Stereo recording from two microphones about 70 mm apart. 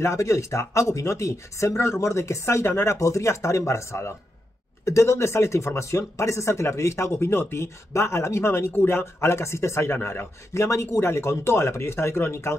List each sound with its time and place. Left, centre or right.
0.0 s speech: left